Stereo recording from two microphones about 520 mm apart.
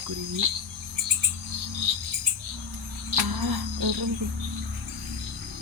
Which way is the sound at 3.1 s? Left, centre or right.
Right.